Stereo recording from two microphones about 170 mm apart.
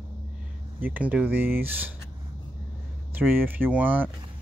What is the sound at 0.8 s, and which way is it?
Speech, 10° right (ahead or behind).